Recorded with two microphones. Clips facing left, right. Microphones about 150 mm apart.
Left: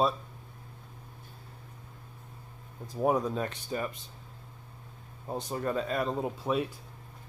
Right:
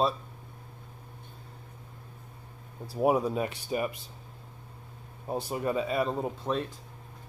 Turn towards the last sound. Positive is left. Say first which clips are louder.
# left 1 dB
turn(degrees=5)  # may be behind; listen again after turning